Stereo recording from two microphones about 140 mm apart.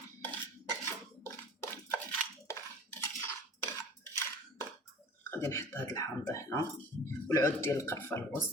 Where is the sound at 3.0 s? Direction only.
25° left (ahead or behind).